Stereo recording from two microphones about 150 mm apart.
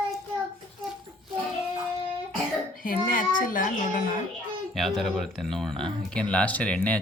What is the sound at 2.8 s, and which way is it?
Speech, 65° left (ahead or behind).